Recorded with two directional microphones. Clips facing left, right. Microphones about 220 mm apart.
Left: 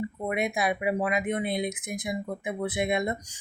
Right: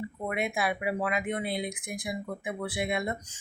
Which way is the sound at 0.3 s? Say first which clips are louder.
Left 2 dB; 20° left (ahead or behind).